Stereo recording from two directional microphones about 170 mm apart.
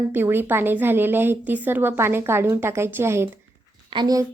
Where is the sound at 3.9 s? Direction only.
25° right (ahead or behind).